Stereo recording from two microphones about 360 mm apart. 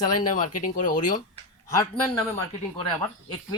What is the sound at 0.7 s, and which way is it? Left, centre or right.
Speech, left.